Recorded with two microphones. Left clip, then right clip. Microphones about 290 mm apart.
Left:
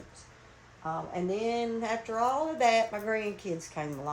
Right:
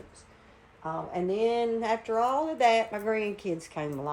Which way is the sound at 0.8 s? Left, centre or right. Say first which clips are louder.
Right 2 dB; right.